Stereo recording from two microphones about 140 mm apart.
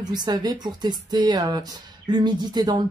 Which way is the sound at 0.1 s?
30° right (ahead or behind).